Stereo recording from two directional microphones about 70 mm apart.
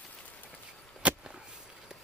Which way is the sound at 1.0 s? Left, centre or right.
Centre.